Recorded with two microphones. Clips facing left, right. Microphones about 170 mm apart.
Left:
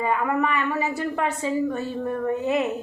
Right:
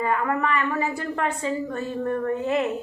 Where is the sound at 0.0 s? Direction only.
15° left (ahead or behind).